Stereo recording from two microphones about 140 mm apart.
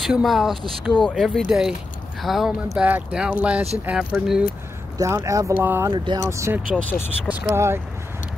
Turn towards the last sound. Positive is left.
turn(degrees=-20)  # may be behind; listen again after turning